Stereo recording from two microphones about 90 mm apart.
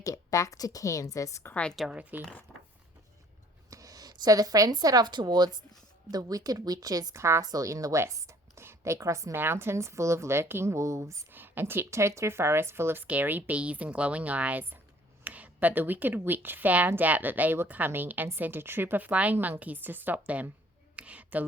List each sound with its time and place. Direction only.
0.0 s a woman's voice: 40° left (ahead or behind)
1.5 s a woman's voice: 15° left (ahead or behind)
1.7 s speech: centre (ahead or behind)
2.0 s speech: 15° right (ahead or behind)
2.5 s a sound: centre (ahead or behind)
3.7 s a woman's voice: 40° right (ahead or behind)
11.3 s a woman's voice: 20° right (ahead or behind)
20.9 s a sound: 15° right (ahead or behind)